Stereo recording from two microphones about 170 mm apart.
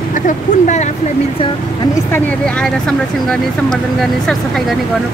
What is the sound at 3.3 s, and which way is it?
Speech, centre (ahead or behind).